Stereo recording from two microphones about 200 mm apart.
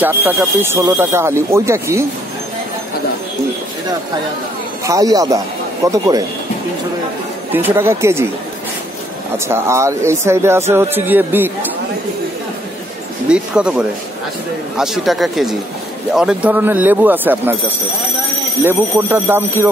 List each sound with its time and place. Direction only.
0.0 s speech: 10° right (ahead or behind)
4.8 s speech: 15° right (ahead or behind)
7.5 s speech: 10° right (ahead or behind)
9.5 s speech: 15° right (ahead or behind)
13.3 s speech: 5° right (ahead or behind)
18.6 s speech: 10° right (ahead or behind)